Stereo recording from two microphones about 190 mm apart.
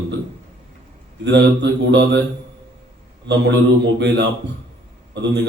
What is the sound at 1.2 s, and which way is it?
Speech, 65° right (ahead or behind).